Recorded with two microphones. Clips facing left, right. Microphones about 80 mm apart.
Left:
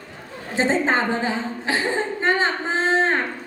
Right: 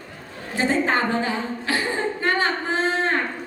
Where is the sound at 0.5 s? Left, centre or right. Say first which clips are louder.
Left 1 dB; left.